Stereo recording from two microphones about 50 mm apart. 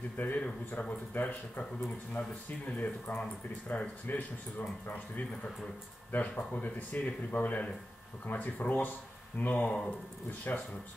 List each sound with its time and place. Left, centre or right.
0.4 s speech: left
1.1 s speech: left
9.7 s speech: centre
10.5 s speech: left